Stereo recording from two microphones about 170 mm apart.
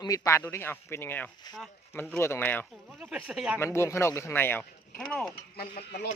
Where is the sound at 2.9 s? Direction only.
5° right (ahead or behind).